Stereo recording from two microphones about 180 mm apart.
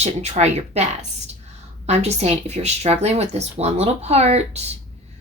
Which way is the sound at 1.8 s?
35° right (ahead or behind).